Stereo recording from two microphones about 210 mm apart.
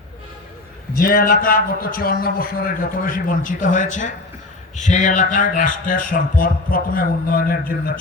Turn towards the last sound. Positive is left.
turn(degrees=45)  # may be behind; listen again after turning